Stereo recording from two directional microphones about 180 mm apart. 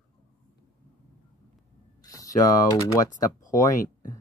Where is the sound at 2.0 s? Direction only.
20° left (ahead or behind).